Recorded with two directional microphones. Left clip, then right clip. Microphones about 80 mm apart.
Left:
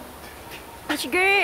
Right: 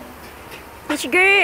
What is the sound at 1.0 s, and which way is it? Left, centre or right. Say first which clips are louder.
Speech: right 6 dB; right.